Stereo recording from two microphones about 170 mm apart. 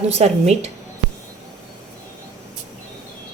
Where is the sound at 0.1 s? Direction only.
40° right (ahead or behind).